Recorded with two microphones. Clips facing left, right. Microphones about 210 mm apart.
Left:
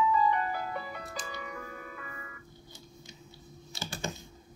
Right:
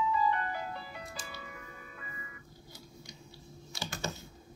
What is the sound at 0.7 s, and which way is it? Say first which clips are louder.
Music: left 5 dB; 85° left.